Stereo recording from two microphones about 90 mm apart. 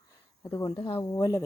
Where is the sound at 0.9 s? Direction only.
35° left (ahead or behind).